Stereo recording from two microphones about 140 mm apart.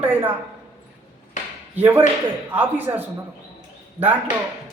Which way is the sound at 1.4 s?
60° left (ahead or behind).